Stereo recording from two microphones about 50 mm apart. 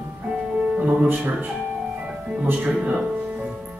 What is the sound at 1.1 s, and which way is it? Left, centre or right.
Speech, right.